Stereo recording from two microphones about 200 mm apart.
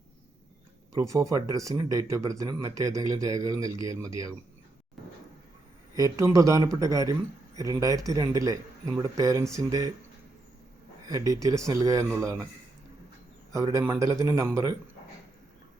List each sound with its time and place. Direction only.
0.9 s speech: 15° right (ahead or behind)
5.9 s speech: 15° right (ahead or behind)
11.1 s speech: 15° right (ahead or behind)
13.5 s speech: 15° right (ahead or behind)